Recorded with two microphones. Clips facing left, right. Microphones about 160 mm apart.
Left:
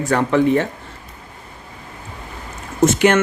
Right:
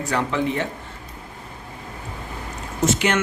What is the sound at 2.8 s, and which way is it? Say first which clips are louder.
Speech: left 7 dB; 50° left (ahead or behind).